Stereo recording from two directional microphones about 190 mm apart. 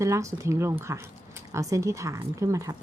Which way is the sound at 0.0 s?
15° right (ahead or behind).